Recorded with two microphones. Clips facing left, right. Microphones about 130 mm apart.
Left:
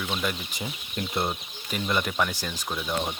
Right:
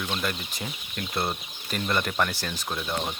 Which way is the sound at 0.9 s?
20° left (ahead or behind).